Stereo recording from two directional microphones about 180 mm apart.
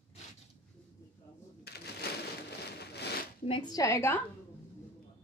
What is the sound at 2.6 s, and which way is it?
Rain on surface, 65° left (ahead or behind).